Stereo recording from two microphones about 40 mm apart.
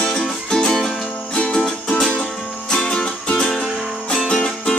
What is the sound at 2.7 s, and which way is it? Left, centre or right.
Music, centre.